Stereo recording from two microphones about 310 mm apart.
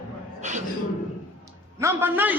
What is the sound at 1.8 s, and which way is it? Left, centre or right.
Speech, centre.